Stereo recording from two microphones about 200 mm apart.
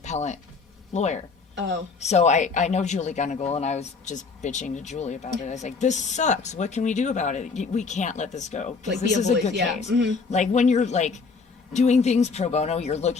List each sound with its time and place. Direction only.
0.0 s speech: 35° left (ahead or behind)
1.5 s speech: 60° right (ahead or behind)
2.0 s speech: 35° left (ahead or behind)